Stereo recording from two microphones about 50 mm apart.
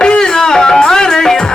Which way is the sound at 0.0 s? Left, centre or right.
Centre.